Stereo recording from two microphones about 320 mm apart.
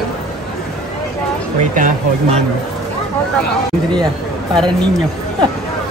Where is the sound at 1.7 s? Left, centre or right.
Right.